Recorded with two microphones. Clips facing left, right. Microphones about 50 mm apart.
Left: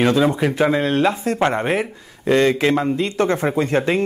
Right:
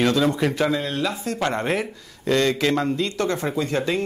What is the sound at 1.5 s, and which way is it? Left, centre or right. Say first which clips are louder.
Speech: left 4 dB; centre.